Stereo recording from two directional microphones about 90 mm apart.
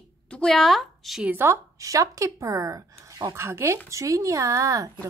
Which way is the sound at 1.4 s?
35° right (ahead or behind).